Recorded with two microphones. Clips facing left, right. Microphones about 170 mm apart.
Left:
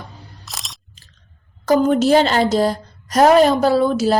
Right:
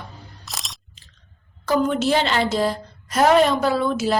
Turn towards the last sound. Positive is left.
turn(degrees=35)  # may be behind; listen again after turning